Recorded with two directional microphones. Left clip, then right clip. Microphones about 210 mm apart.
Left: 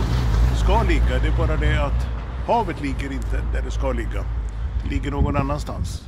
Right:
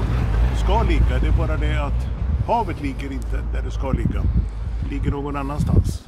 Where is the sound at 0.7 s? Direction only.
15° left (ahead or behind).